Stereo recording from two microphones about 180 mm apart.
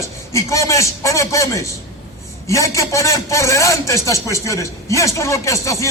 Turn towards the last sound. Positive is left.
turn(degrees=15)  # may be behind; listen again after turning